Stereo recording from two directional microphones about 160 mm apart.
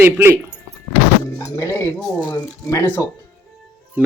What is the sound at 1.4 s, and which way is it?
Speech, 20° left (ahead or behind).